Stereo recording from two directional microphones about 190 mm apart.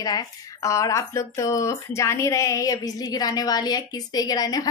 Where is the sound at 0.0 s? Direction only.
20° left (ahead or behind).